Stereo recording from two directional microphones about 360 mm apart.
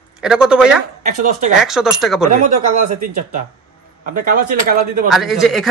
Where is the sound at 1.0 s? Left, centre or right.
Right.